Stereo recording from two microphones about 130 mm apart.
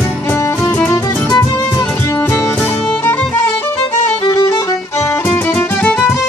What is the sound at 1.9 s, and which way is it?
Music, 15° left (ahead or behind).